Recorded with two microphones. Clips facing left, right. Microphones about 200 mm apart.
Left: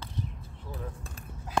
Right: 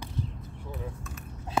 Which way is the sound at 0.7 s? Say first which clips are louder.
Right 1 dB; 30° left (ahead or behind).